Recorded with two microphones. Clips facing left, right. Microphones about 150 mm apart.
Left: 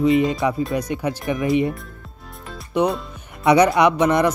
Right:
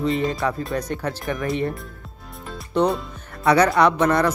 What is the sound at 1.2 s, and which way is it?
Speech, centre (ahead or behind).